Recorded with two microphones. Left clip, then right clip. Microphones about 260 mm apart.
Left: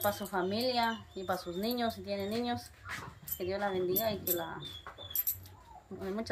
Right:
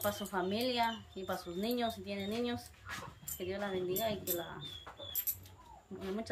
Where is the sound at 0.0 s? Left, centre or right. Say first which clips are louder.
Left 3 dB; centre.